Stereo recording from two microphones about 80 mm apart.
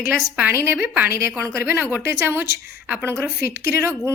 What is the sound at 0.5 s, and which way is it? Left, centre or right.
A woman's voice, right.